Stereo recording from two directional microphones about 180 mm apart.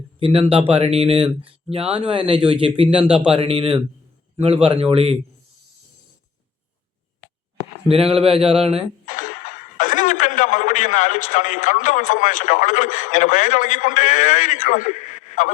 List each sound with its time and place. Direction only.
0.2 s speech: 30° right (ahead or behind)
7.9 s speech: 35° right (ahead or behind)
9.0 s speech: 45° left (ahead or behind)